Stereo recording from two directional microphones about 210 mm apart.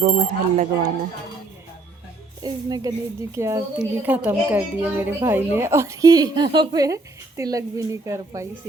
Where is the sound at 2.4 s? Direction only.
20° right (ahead or behind).